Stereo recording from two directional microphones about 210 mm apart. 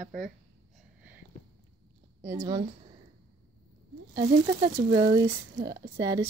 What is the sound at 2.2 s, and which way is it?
Speech, 20° right (ahead or behind).